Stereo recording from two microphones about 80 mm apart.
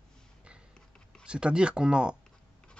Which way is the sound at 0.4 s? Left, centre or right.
Centre.